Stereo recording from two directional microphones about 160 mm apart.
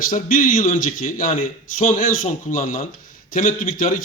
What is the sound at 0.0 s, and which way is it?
A man's voice, 60° left (ahead or behind).